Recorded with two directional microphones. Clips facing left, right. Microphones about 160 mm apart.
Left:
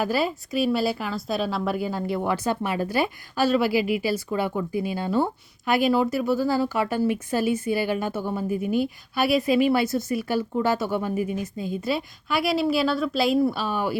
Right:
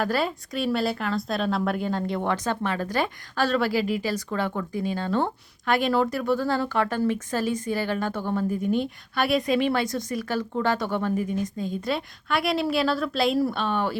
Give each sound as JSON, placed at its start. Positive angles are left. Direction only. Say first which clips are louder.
{"t": 0.0, "sound": "speech", "louder": "left 1 dB", "side_deg": 5}